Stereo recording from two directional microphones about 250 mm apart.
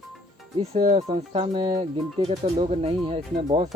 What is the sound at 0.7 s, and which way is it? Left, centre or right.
Speech, right.